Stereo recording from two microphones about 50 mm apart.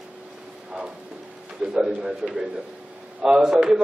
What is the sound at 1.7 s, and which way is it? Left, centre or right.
A man's voice, centre.